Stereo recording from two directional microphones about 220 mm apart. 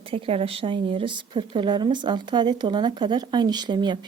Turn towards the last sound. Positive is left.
turn(degrees=-20)  # may be behind; listen again after turning